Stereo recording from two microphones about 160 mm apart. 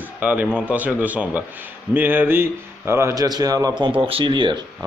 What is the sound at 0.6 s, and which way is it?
A man's voice, 10° right (ahead or behind).